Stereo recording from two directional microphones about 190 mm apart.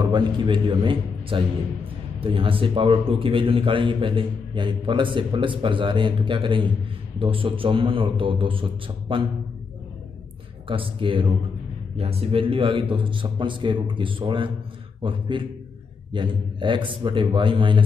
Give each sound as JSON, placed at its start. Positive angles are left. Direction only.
{"t": 0.0, "sound": "a man's voice", "side_deg": -25}
{"t": 10.7, "sound": "a man's voice", "side_deg": -25}